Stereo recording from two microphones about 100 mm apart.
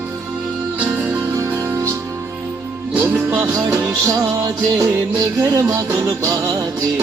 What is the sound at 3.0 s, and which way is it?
Music, 25° right (ahead or behind).